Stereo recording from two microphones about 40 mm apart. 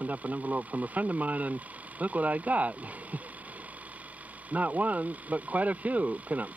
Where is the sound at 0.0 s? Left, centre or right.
Right.